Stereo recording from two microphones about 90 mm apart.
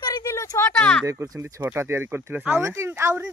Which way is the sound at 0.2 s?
35° left (ahead or behind).